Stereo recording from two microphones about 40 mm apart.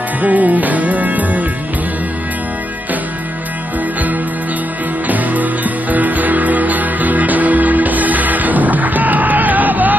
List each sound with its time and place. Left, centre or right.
0.2 s music: right
5.0 s music: right